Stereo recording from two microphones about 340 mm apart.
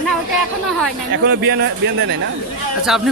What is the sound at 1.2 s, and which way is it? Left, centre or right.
Speech, right.